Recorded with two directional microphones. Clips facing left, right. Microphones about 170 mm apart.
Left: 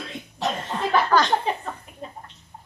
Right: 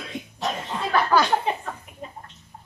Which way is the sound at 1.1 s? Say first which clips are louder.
Right 1 dB; 10° right (ahead or behind).